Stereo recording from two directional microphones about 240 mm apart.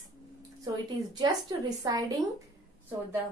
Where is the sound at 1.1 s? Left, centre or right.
Centre.